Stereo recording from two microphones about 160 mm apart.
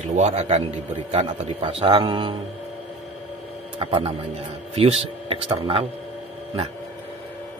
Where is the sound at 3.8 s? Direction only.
35° right (ahead or behind).